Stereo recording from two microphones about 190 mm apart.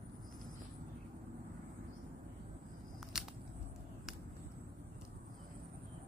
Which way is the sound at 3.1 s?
Centre (ahead or behind).